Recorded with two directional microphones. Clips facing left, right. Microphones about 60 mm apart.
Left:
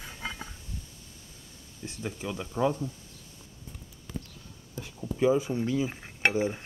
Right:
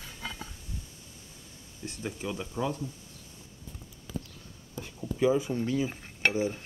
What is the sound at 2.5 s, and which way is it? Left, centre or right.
Dishes, left.